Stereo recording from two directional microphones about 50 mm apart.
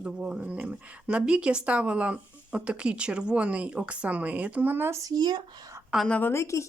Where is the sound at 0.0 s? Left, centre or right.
Right.